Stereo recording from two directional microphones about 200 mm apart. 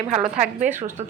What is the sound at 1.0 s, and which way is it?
Speech, 35° right (ahead or behind).